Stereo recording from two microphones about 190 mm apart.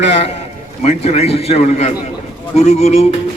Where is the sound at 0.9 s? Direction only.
35° left (ahead or behind).